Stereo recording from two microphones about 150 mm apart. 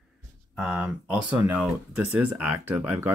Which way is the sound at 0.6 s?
5° right (ahead or behind).